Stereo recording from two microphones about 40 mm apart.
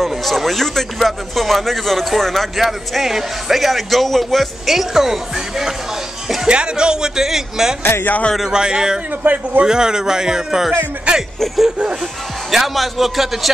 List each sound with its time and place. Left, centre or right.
0.0 s speech: centre
6.4 s speech: right
7.8 s speech: left
8.5 s speech: right
9.2 s a man's voice: right
9.7 s speech: centre
11.1 s speech: right
12.4 s speech: centre